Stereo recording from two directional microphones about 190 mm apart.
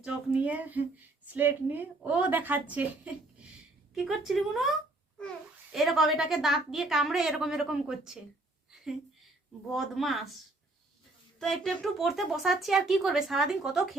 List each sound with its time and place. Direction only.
0.0 s a woman's voice: 5° right (ahead or behind)
5.7 s speech: centre (ahead or behind)
8.7 s a sound: 5° right (ahead or behind)
9.7 s speech: centre (ahead or behind)
11.3 s speech: centre (ahead or behind)